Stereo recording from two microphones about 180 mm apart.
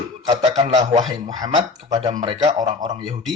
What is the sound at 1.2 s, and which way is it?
Speech, 20° right (ahead or behind).